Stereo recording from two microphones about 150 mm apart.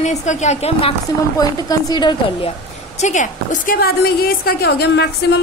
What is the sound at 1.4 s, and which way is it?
A woman's voice, 25° left (ahead or behind).